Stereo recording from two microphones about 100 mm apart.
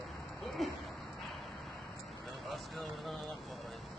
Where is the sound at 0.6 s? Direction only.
Centre (ahead or behind).